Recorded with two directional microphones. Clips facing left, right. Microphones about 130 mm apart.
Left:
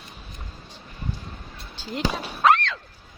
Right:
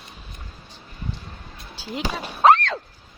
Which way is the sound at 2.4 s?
40° right (ahead or behind).